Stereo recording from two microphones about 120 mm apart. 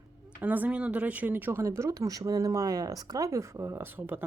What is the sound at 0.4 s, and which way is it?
Speech, 15° right (ahead or behind).